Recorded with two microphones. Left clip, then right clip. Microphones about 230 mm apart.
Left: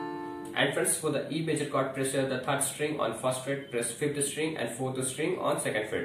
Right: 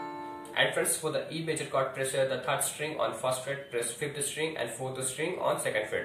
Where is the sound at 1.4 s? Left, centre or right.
Centre.